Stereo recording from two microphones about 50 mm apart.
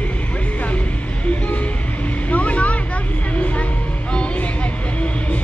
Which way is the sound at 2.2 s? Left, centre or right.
Left.